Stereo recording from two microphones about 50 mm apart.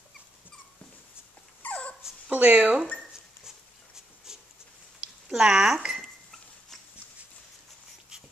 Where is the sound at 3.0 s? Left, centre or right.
Centre.